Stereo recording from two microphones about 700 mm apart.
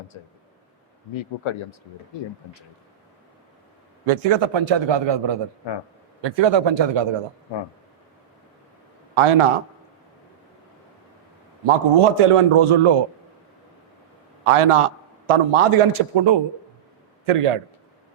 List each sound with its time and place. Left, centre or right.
0.1 s speech: left
4.0 s a man's voice: right
9.1 s a man's voice: right
11.6 s a man's voice: right
14.4 s a man's voice: right